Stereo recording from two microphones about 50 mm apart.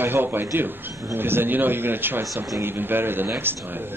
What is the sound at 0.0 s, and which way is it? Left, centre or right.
A man's voice, right.